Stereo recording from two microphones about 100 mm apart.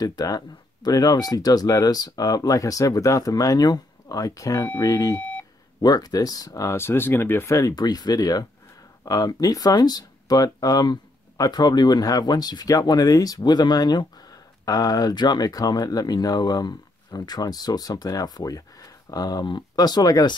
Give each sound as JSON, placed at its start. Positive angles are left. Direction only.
{"t": 0.0, "sound": "speech", "side_deg": 40}
{"t": 5.1, "sound": "beep", "side_deg": 10}
{"t": 5.8, "sound": "speech", "side_deg": 40}